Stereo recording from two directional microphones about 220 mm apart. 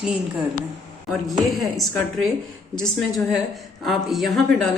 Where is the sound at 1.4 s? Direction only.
Centre (ahead or behind).